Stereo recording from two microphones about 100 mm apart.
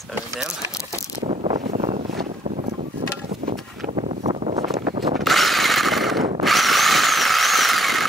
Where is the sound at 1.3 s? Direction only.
90° right.